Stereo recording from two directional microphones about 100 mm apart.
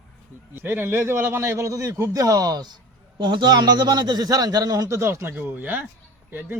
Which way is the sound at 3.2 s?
50° right (ahead or behind).